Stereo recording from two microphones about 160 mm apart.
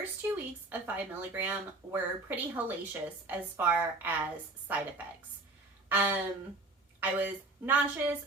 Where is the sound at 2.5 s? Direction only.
10° right (ahead or behind).